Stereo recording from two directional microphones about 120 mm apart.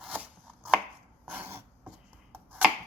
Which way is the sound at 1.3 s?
15° right (ahead or behind).